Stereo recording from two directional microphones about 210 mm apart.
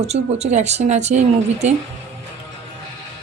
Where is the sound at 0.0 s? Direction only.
30° right (ahead or behind).